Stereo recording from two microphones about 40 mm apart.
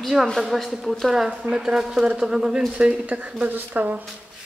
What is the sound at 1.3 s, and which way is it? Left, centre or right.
Speech, right.